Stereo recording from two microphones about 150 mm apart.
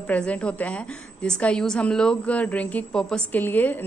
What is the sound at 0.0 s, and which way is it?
A woman's voice, 10° left (ahead or behind).